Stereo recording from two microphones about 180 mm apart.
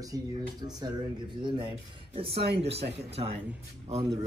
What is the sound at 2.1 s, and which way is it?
A man's voice, 30° right (ahead or behind).